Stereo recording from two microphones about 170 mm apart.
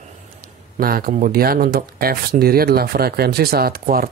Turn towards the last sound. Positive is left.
turn(degrees=-60)  # may be behind; listen again after turning